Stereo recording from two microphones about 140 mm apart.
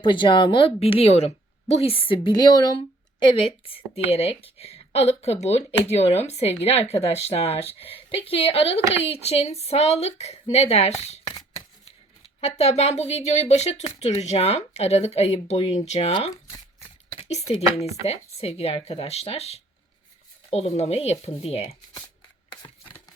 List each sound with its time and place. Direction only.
0.0 s a woman's voice: 35° left (ahead or behind); by 11.2 s 50° left (ahead or behind)
12.4 s speech: 50° left (ahead or behind)
17.2 s a sound: 50° left (ahead or behind)
18.0 s speech: 45° left (ahead or behind)